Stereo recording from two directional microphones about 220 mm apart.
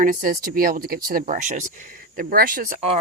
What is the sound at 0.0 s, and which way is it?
Speech, 40° right (ahead or behind).